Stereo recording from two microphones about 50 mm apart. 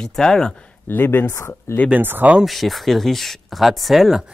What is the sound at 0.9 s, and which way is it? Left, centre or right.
Speech, left.